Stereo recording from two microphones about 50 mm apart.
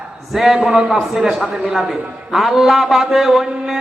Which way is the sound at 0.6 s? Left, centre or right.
Right.